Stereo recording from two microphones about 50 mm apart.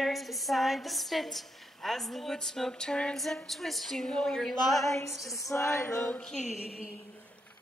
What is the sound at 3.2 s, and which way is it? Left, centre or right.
A woman's voice, centre.